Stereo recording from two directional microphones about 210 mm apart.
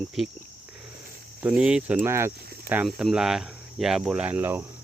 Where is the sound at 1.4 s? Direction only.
5° right (ahead or behind).